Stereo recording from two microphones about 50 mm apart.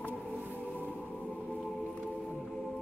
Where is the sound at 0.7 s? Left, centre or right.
Left.